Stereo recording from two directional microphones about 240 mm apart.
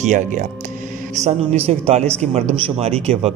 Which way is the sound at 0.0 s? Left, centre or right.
Right.